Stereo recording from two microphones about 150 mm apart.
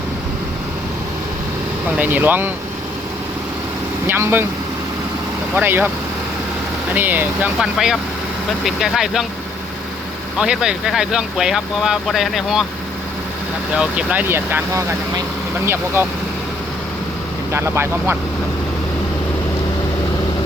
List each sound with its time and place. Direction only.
2.0 s speech: 10° right (ahead or behind)
4.0 s speech: 15° right (ahead or behind)
5.5 s speech: 15° right (ahead or behind)
6.9 s speech: 10° right (ahead or behind)
10.3 s speech: 5° right (ahead or behind)
13.7 s speech: 10° right (ahead or behind)
17.5 s speech: 15° right (ahead or behind)